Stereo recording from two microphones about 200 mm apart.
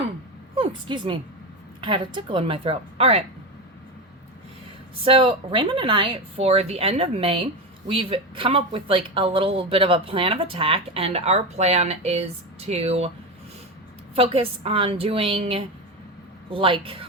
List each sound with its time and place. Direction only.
0.5 s a woman's voice: 25° right (ahead or behind)
5.0 s speech: 25° right (ahead or behind)
14.2 s speech: 30° right (ahead or behind)